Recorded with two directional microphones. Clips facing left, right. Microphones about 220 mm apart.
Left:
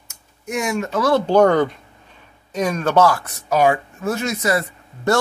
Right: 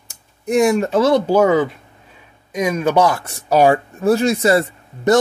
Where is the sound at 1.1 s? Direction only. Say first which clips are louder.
Left 3 dB; 5° right (ahead or behind).